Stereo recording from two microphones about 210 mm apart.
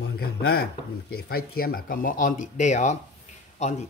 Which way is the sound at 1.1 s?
45° left (ahead or behind).